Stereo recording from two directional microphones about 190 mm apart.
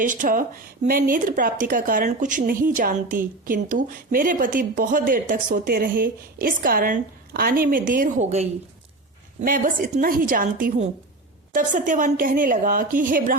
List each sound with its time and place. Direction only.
0.0 s speech: 45° right (ahead or behind)
9.4 s speech: 45° right (ahead or behind)